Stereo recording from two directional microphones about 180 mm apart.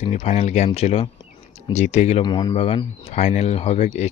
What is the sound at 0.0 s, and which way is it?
Speech, 40° left (ahead or behind).